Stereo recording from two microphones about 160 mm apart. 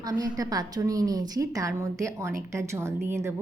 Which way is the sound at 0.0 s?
25° right (ahead or behind).